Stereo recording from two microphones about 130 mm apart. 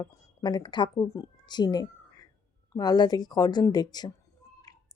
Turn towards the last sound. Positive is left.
turn(degrees=30)  # may be behind; listen again after turning